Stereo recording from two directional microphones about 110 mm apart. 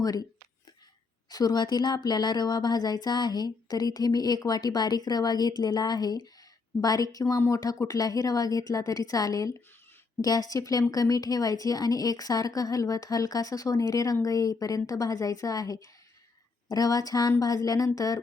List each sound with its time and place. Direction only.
0.0 s a woman's voice: 35° left (ahead or behind)
1.3 s a woman's voice: 35° left (ahead or behind)